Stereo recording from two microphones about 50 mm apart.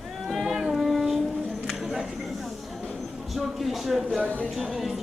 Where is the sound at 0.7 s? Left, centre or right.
Centre.